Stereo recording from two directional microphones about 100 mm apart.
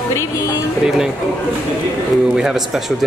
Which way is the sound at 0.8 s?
5° right (ahead or behind).